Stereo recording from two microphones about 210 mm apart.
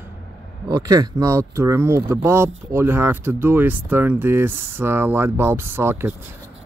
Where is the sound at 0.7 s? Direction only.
15° right (ahead or behind).